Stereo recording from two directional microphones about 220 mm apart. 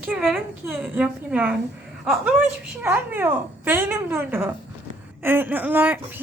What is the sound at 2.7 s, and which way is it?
Speech, 10° right (ahead or behind).